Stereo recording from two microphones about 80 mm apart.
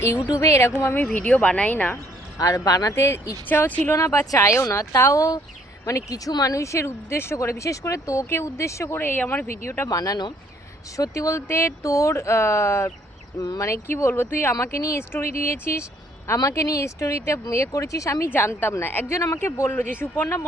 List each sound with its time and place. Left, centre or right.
0.0 s speech: left
1.1 s speech: centre
2.4 s speech: left
2.9 s speech: left
3.4 s speech: left
3.9 s speech: left
9.9 s speech: left
14.6 s speech: left
18.3 s speech: left
19.7 s speech: left
20.2 s speech: left